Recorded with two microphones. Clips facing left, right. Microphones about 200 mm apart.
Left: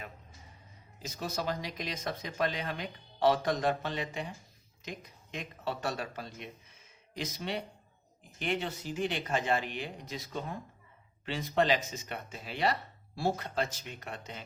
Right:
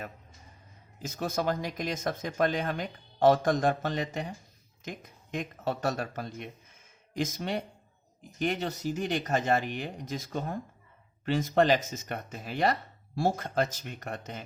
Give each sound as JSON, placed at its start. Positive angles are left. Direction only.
{"t": 1.0, "sound": "speech", "side_deg": -50}